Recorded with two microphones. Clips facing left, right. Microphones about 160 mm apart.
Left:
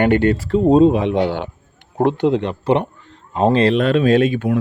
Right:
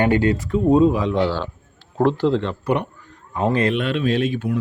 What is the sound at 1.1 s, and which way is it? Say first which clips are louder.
Speech: left 2 dB; 20° left (ahead or behind).